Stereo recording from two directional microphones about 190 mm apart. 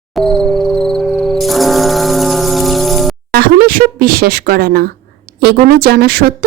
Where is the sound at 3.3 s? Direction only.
50° right (ahead or behind).